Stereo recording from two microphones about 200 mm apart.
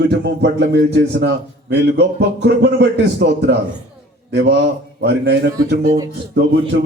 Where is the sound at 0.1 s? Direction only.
55° right (ahead or behind).